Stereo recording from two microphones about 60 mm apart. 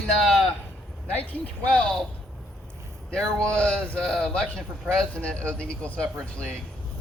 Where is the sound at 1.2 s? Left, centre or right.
Left.